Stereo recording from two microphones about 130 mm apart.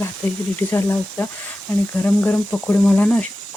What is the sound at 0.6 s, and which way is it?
Speech, 15° left (ahead or behind).